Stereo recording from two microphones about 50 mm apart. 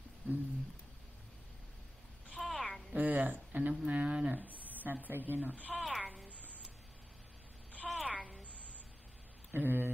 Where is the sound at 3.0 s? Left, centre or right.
Right.